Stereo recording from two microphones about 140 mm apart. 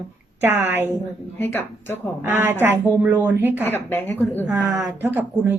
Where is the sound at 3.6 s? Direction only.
15° left (ahead or behind).